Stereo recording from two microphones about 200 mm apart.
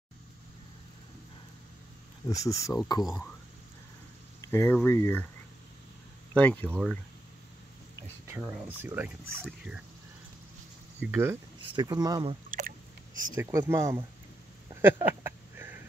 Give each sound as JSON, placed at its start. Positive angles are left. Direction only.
{"t": 2.2, "sound": "speech", "side_deg": 15}
{"t": 3.0, "sound": "speech", "side_deg": 0}
{"t": 4.4, "sound": "speech", "side_deg": 10}
{"t": 6.3, "sound": "speech", "side_deg": 5}
{"t": 8.4, "sound": "speech", "side_deg": -5}
{"t": 11.0, "sound": "speech", "side_deg": -10}
{"t": 12.4, "sound": "a sound", "side_deg": -40}
{"t": 13.3, "sound": "speech", "side_deg": -15}
{"t": 14.7, "sound": "a sound", "side_deg": -10}